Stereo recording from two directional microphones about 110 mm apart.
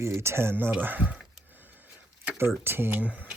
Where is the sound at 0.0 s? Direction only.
25° right (ahead or behind).